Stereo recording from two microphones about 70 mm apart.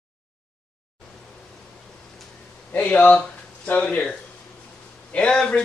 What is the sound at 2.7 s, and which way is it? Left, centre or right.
Speech, left.